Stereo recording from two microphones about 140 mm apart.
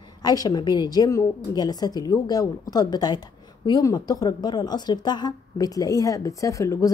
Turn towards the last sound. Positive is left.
turn(degrees=25)  # may be behind; listen again after turning